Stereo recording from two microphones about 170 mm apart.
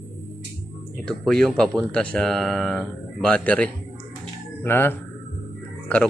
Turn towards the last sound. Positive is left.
turn(degrees=10)  # may be behind; listen again after turning